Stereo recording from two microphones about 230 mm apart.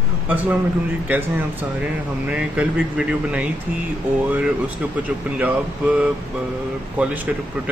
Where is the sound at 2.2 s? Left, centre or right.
Centre.